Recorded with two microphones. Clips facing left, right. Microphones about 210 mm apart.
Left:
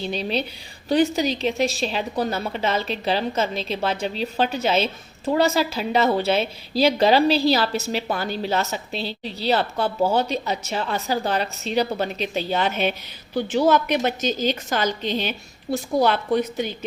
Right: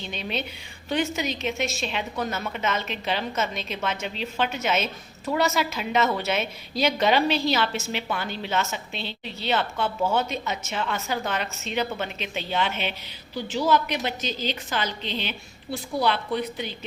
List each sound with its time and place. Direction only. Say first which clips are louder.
0.0 s a woman's voice: left 6 dB; 35° left (ahead or behind)
13.3 s a woman's voice: left 5 dB; 55° left (ahead or behind)